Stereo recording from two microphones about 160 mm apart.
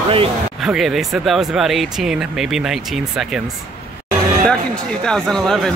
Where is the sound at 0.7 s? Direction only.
Centre (ahead or behind).